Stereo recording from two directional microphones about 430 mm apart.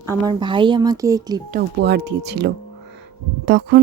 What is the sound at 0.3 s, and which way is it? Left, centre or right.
Speech, centre.